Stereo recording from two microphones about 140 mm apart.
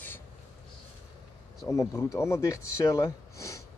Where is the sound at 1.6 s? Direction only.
20° left (ahead or behind).